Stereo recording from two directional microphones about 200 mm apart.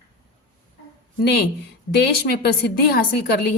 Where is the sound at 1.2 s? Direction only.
55° left (ahead or behind).